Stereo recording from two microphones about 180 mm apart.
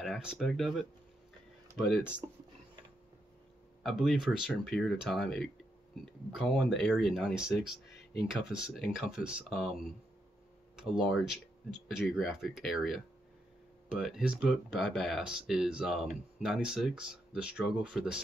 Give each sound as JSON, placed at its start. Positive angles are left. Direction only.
{"t": 0.0, "sound": "speech", "side_deg": 0}
{"t": 3.8, "sound": "speech", "side_deg": 0}
{"t": 7.9, "sound": "a sound", "side_deg": 65}
{"t": 8.3, "sound": "speech", "side_deg": -5}